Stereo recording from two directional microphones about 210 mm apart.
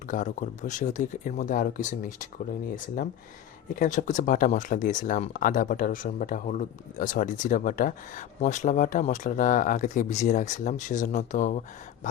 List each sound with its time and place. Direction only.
0.1 s speech: 35° left (ahead or behind)